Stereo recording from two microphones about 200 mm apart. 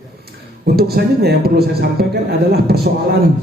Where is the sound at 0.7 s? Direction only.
50° right (ahead or behind).